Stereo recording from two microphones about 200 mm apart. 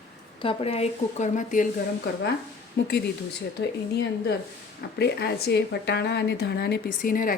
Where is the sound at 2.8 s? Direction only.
60° left (ahead or behind).